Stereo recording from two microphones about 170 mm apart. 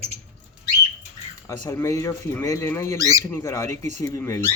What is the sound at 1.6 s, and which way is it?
Speech, 15° left (ahead or behind).